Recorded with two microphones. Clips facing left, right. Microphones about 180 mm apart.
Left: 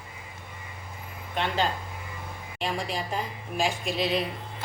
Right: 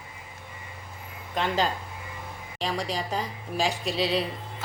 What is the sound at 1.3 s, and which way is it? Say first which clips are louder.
Speech: right 1 dB; 40° right (ahead or behind).